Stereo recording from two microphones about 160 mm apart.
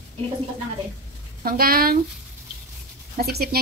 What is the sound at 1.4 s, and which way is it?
Speech, 65° right (ahead or behind).